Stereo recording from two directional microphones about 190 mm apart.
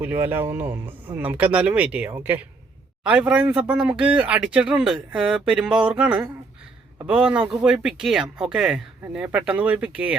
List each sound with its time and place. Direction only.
0.0 s speech: 10° right (ahead or behind)